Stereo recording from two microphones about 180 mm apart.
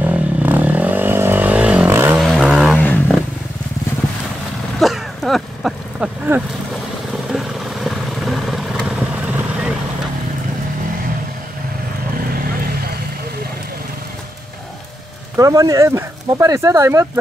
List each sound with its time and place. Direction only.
0.0 s vehicle: 10° right (ahead or behind)
2.1 s vehicle: centre (ahead or behind)
4.7 s a sound: centre (ahead or behind)
7.3 s vehicle: centre (ahead or behind)
12.3 s vehicle: 55° right (ahead or behind)
15.3 s speech: 20° right (ahead or behind)